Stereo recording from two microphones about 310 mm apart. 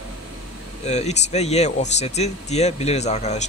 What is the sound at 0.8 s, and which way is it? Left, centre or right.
Speech, left.